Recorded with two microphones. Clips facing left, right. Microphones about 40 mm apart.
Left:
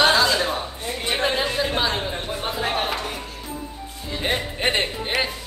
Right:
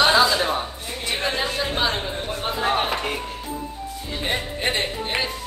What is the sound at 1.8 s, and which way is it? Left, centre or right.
Chatter, centre.